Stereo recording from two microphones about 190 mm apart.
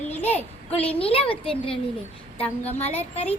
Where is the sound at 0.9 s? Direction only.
30° left (ahead or behind).